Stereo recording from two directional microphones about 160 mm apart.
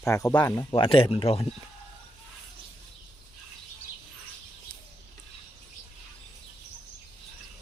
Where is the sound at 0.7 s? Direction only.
35° left (ahead or behind).